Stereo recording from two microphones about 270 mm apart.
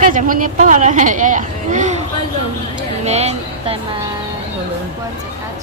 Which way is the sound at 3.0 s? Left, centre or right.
Right.